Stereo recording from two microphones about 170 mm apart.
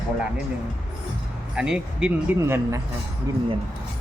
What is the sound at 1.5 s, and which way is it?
Speech, 5° right (ahead or behind).